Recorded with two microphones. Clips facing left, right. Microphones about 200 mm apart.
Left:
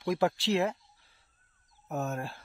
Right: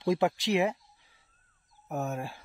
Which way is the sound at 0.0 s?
25° right (ahead or behind).